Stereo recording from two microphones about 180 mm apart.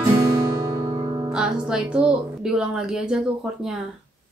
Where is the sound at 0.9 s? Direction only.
30° right (ahead or behind).